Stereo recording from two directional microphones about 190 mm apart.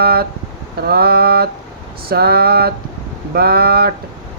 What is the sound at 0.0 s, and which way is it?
Speech, 55° right (ahead or behind).